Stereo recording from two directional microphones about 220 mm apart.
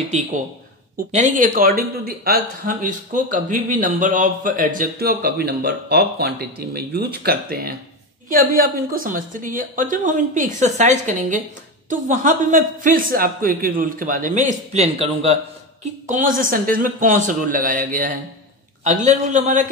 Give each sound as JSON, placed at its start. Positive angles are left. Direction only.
{"t": 1.1, "sound": "speech", "side_deg": -35}